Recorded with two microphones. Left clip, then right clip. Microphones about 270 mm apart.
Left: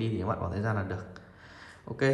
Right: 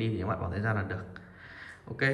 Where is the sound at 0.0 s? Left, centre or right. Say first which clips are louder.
Left 1 dB; centre.